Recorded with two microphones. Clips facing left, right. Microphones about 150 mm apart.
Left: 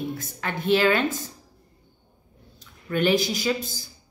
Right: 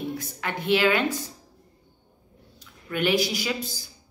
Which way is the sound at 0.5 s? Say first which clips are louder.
Left 2 dB; 45° left (ahead or behind).